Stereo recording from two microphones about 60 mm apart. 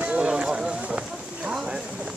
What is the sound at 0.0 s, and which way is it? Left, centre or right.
Run, centre.